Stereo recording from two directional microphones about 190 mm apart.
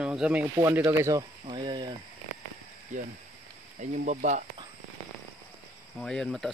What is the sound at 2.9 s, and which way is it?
Speech, 40° right (ahead or behind).